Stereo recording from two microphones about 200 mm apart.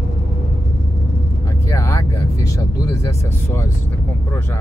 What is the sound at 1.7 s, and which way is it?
Speech, 15° left (ahead or behind).